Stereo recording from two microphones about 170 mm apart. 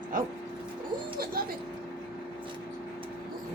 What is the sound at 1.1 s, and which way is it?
Music, 60° right (ahead or behind).